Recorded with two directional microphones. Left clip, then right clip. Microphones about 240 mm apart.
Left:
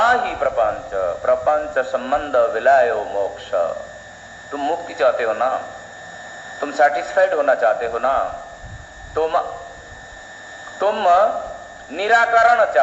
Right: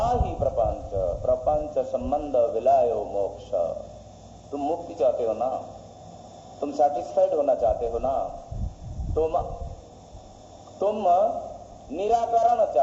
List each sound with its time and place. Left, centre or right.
0.0 s a sound: left
4.5 s a man's voice: left
6.6 s a man's voice: left
10.8 s a man's voice: left